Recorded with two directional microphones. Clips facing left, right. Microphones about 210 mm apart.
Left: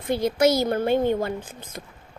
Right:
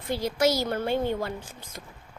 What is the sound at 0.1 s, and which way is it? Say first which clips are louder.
A child's voice: left 4 dB; 20° left (ahead or behind).